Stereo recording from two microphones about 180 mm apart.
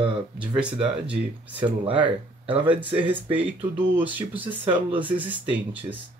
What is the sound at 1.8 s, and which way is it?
Speech, 30° right (ahead or behind).